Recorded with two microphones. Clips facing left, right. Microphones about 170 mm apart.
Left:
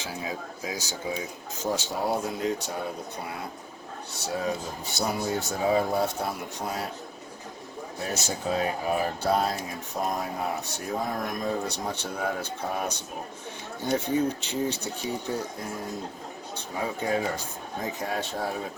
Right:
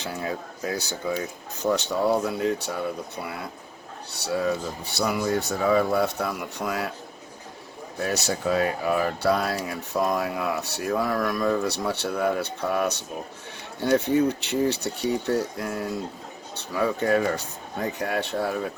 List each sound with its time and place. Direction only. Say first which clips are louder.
0.0 s speech: right 3 dB; 60° right (ahead or behind)
4.1 s speech: right 5 dB; 65° right (ahead or behind)
4.9 s speech: right 4 dB; 75° right (ahead or behind)
7.9 s speech: right 5 dB; 70° right (ahead or behind)